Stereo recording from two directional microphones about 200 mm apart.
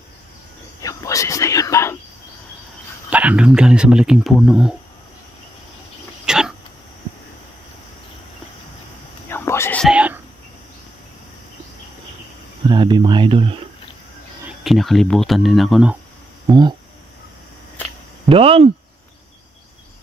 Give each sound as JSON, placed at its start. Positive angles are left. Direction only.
{"t": 0.8, "sound": "whispering", "side_deg": 15}
{"t": 3.1, "sound": "speech", "side_deg": -5}
{"t": 6.2, "sound": "a sound", "side_deg": -5}
{"t": 9.3, "sound": "whispering", "side_deg": 15}
{"t": 9.8, "sound": "whispering", "side_deg": -5}
{"t": 12.6, "sound": "a sound", "side_deg": -20}
{"t": 14.6, "sound": "speech", "side_deg": 0}
{"t": 16.4, "sound": "speech", "side_deg": -20}
{"t": 18.3, "sound": "speech", "side_deg": -30}